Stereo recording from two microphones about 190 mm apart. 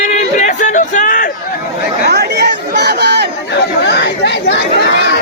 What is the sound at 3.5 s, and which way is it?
Chatter, 65° left (ahead or behind).